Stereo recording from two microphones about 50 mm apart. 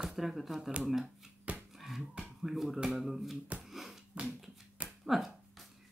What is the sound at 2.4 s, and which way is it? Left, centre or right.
Speech, centre.